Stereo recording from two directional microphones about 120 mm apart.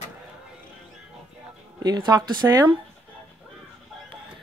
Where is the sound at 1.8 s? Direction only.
35° right (ahead or behind).